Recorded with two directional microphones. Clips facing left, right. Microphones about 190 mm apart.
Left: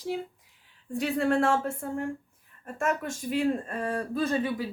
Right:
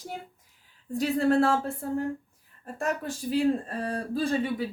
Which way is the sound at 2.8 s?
35° right (ahead or behind).